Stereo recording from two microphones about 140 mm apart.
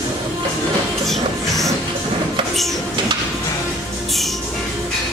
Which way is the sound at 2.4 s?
35° right (ahead or behind).